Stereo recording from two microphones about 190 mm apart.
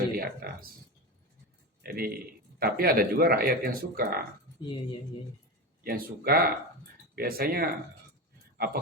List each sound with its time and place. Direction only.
0.2 s speech: 50° right (ahead or behind)
1.8 s a man's voice: 55° right (ahead or behind)
4.6 s speech: 25° left (ahead or behind)
5.8 s speech: 50° right (ahead or behind)